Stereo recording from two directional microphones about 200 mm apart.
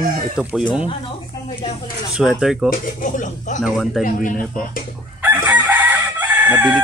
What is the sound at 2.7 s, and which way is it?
Speech, 45° left (ahead or behind).